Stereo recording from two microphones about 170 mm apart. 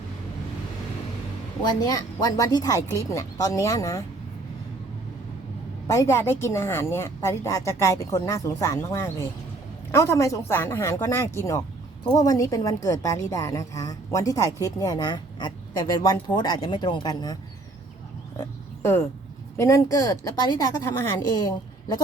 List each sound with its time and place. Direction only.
1.6 s a woman's voice: 20° left (ahead or behind)
5.9 s a woman's voice: 15° left (ahead or behind)
18.3 s pig: 15° left (ahead or behind)
19.5 s a woman's voice: 15° left (ahead or behind)